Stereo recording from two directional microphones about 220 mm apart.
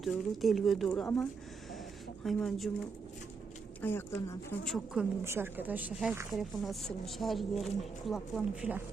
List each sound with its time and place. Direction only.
0.0 s speech: centre (ahead or behind)
3.8 s speech: 10° left (ahead or behind)
5.2 s speech: 10° right (ahead or behind)